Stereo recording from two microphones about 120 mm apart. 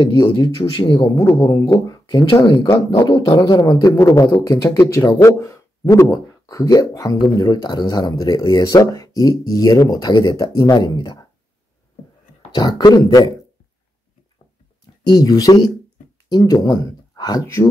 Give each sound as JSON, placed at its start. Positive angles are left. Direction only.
{"t": 0.6, "sound": "speech", "side_deg": 45}
{"t": 0.9, "sound": "a man's voice", "side_deg": 25}
{"t": 12.5, "sound": "a man's voice", "side_deg": 35}
{"t": 15.0, "sound": "a man's voice", "side_deg": 30}